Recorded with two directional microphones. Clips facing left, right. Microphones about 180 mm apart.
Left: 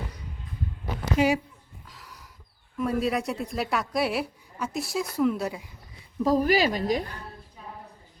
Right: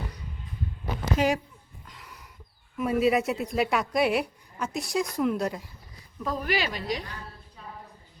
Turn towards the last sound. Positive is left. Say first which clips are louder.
# left 6 dB
turn(degrees=45)  # may be behind; listen again after turning